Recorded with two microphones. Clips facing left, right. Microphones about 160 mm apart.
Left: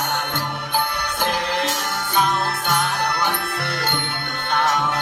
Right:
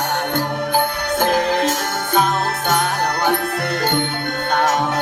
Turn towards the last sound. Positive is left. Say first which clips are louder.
# right 3 dB
turn(degrees=-45)  # may be behind; listen again after turning